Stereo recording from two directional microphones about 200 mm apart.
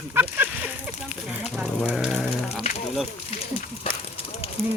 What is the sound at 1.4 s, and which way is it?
Sheep, 5° right (ahead or behind).